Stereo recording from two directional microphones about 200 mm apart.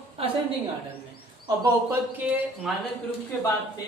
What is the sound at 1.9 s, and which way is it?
Speech, 10° right (ahead or behind).